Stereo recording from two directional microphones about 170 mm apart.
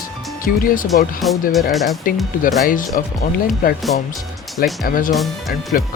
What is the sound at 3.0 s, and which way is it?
Speech, 55° left (ahead or behind).